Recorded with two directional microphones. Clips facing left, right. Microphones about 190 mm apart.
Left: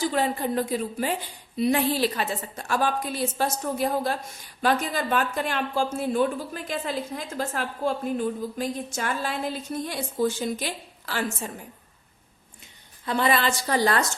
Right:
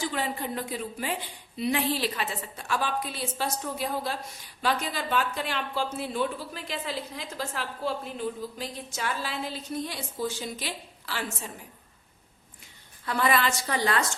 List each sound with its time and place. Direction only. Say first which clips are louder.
0.0 s a woman's voice: left 6 dB; 40° left (ahead or behind)
13.1 s a woman's voice: left 2 dB; 25° left (ahead or behind)